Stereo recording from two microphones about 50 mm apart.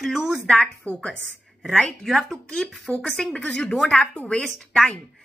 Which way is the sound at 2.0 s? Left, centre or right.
Centre.